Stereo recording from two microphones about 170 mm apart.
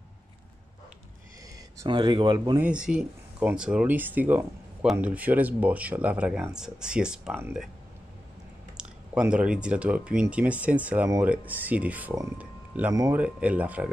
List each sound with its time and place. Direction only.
1.8 s speech: 25° right (ahead or behind)
2.6 s speech: 5° right (ahead or behind)
8.7 s speech: 5° right (ahead or behind)
13.2 s speech: 10° right (ahead or behind)